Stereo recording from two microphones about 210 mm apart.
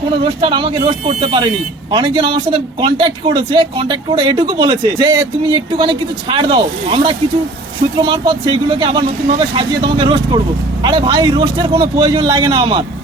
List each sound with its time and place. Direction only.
0.4 s a man's voice: 25° right (ahead or behind)